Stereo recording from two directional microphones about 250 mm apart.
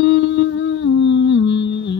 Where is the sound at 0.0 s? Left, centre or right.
Left.